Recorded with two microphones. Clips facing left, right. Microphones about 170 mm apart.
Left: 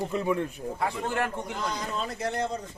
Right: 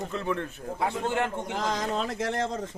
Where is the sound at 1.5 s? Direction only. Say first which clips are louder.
Right 5 dB; 90° right.